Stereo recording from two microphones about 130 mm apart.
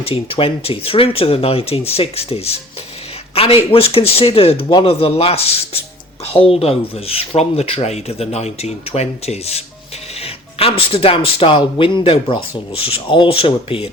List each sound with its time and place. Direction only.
0.0 s speech: 45° left (ahead or behind)